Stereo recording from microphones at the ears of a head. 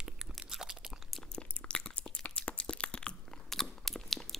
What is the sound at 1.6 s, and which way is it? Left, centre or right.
Biting, left.